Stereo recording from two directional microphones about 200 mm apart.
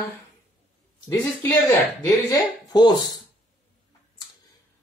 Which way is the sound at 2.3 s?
20° left (ahead or behind).